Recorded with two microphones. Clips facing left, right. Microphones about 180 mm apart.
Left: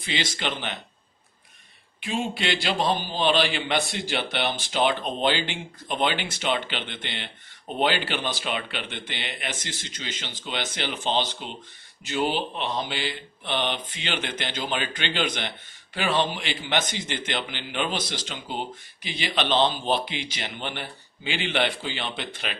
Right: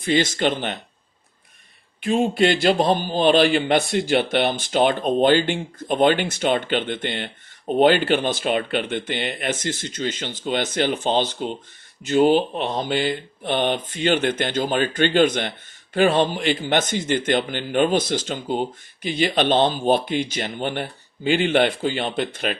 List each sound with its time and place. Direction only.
0.0 s speech: 50° right (ahead or behind)
2.0 s speech: 45° right (ahead or behind)